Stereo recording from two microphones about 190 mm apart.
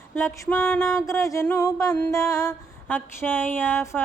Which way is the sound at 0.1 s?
10° left (ahead or behind).